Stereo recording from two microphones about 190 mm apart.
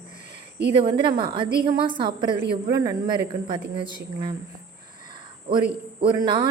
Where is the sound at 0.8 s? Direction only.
25° right (ahead or behind).